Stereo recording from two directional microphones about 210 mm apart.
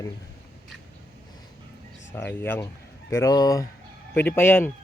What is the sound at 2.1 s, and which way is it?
A man's voice, 10° left (ahead or behind).